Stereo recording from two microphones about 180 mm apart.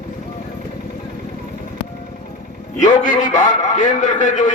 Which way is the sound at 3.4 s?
45° left (ahead or behind).